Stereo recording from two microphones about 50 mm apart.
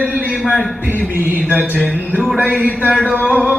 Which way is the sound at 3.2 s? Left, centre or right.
Centre.